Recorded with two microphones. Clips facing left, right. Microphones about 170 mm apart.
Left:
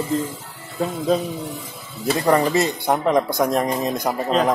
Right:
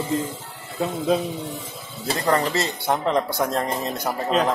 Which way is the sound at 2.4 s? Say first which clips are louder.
Left 4 dB; 15° left (ahead or behind).